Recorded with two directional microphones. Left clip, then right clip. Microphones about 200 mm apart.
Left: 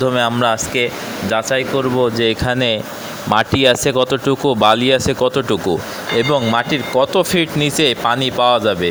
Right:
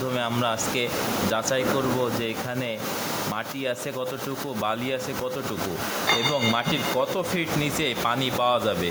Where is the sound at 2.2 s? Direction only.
45° left (ahead or behind).